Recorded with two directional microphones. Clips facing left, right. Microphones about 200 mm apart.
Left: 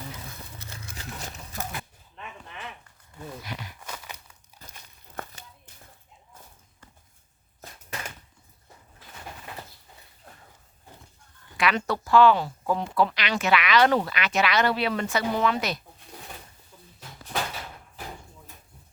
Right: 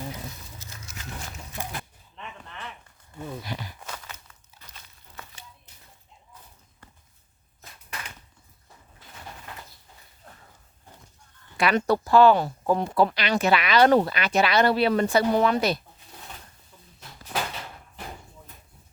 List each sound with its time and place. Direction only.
3.4 s speech: 30° right (ahead or behind)
3.9 s crumpling: 15° left (ahead or behind)
5.1 s a sound: 50° left (ahead or behind)
11.5 s speech: 35° right (ahead or behind)